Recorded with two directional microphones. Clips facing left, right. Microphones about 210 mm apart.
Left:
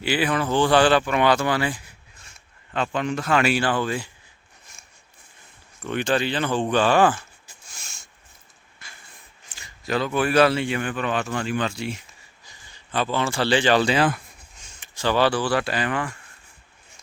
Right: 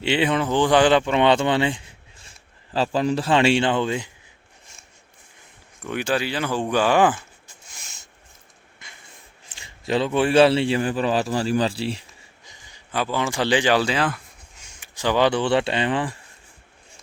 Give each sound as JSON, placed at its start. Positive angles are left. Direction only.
{"t": 0.0, "sound": "speech", "side_deg": -25}
{"t": 5.8, "sound": "speech", "side_deg": -10}
{"t": 7.8, "sound": "a sound", "side_deg": -20}
{"t": 9.5, "sound": "a man's voice", "side_deg": -25}
{"t": 12.5, "sound": "speech", "side_deg": -15}
{"t": 13.8, "sound": "speech", "side_deg": 0}
{"t": 14.8, "sound": "speech", "side_deg": -15}